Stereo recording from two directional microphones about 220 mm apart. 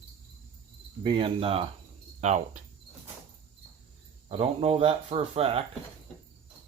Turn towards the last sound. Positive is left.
turn(degrees=-25)  # may be behind; listen again after turning